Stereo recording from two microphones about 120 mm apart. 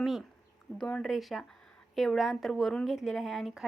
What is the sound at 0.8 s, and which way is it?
Speech, 10° left (ahead or behind).